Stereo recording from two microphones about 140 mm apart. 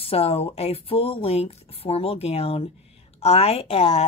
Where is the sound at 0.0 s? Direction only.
45° left (ahead or behind).